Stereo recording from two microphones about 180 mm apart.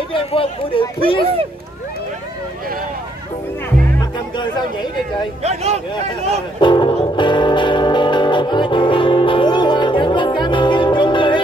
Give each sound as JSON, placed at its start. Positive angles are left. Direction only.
{"t": 0.1, "sound": "speech", "side_deg": 30}
{"t": 5.4, "sound": "speech", "side_deg": -35}
{"t": 6.6, "sound": "music", "side_deg": 25}